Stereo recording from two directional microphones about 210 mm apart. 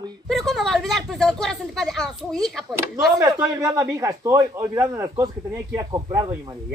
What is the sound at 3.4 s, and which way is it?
Speech, 15° right (ahead or behind).